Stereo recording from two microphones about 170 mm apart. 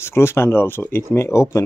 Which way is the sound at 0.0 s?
15° left (ahead or behind).